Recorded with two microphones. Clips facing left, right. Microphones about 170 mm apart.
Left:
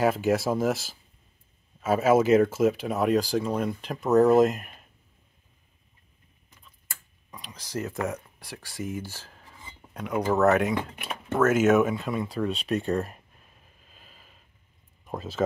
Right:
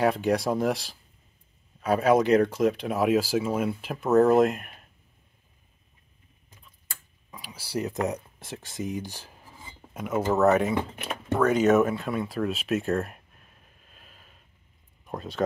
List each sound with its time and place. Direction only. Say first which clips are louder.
0.0 s speech: even; centre (ahead or behind)
7.2 s speech: even; 5° right (ahead or behind)
13.8 s a sound: even; centre (ahead or behind)
15.0 s speech: left 1 dB; centre (ahead or behind)